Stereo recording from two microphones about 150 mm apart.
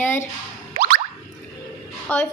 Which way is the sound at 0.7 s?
60° right (ahead or behind).